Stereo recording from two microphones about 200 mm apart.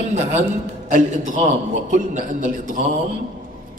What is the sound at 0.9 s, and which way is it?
Speech, 40° right (ahead or behind).